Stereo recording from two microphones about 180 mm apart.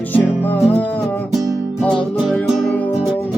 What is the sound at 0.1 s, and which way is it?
Music, 10° left (ahead or behind).